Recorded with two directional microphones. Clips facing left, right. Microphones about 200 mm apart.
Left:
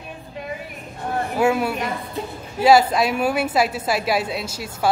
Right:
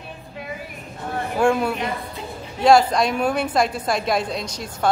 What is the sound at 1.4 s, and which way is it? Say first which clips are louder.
A woman's voice: right 1 dB; 5° left (ahead or behind).